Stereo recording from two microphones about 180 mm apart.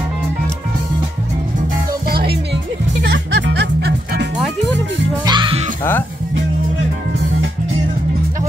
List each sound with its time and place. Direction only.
3.0 s music: 85° right; by 4.3 s 65° right (ahead or behind)
5.2 s music: 25° right (ahead or behind)